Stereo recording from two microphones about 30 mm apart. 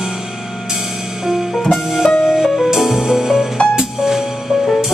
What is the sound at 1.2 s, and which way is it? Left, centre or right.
Music, centre.